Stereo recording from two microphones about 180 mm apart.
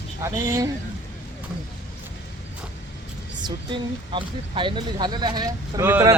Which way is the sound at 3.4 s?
25° right (ahead or behind).